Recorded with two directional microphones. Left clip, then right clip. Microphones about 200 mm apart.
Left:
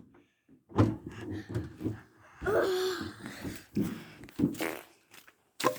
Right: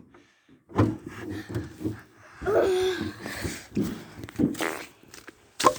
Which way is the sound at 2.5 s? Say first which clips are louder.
Right 6 dB; 5° left (ahead or behind).